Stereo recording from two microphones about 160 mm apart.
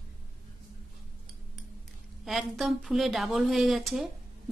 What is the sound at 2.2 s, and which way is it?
Speech, centre (ahead or behind).